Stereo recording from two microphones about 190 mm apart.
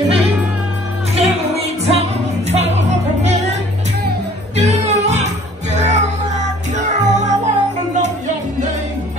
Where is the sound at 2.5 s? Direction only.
35° right (ahead or behind).